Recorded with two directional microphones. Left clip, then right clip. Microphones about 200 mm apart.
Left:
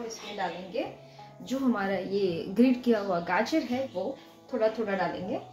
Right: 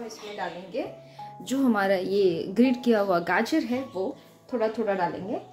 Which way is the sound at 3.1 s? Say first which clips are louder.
Right 3 dB; 60° right (ahead or behind).